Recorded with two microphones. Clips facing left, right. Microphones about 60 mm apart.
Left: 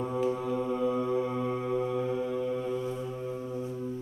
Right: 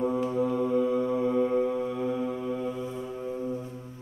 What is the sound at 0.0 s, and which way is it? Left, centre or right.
Mantra, centre.